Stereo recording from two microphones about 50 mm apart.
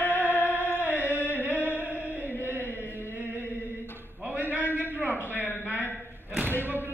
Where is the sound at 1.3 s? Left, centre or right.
Right.